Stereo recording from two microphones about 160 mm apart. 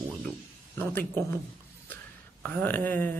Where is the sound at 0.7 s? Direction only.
10° left (ahead or behind).